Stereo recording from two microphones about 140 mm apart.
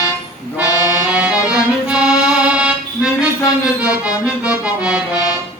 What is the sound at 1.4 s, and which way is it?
Music, 5° right (ahead or behind).